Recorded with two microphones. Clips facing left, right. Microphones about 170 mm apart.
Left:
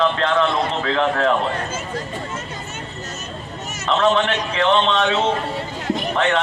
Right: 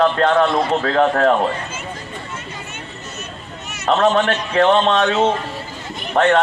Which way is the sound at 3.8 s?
45° right (ahead or behind).